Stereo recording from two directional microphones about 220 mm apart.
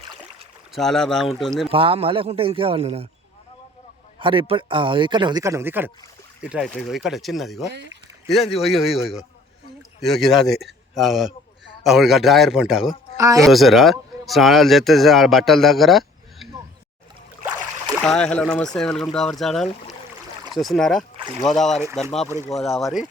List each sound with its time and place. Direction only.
0.7 s a man's voice: centre (ahead or behind)
1.7 s speech: 25° right (ahead or behind)
4.2 s a man's voice: 25° right (ahead or behind); by 7.7 s centre (ahead or behind)
7.7 s speech: 50° right (ahead or behind)
8.5 s a man's voice: centre (ahead or behind)
10.0 s a man's voice: centre (ahead or behind)
13.1 s speech: 15° right (ahead or behind)
13.4 s speech: centre (ahead or behind)
18.0 s a man's voice: 5° left (ahead or behind)
21.2 s rowboat: 25° right (ahead or behind)
21.4 s a man's voice: centre (ahead or behind)